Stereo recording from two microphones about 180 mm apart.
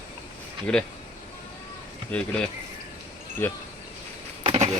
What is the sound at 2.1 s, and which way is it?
Speech, 5° left (ahead or behind).